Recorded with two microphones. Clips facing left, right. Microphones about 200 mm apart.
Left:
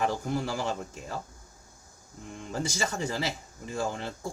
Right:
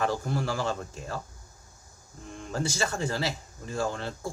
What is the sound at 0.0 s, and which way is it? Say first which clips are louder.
Speech: even; 15° left (ahead or behind).